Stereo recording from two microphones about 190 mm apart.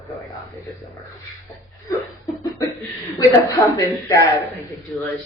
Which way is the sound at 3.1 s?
20° left (ahead or behind).